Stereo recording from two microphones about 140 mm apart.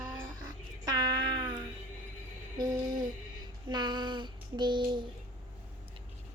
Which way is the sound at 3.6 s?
30° right (ahead or behind).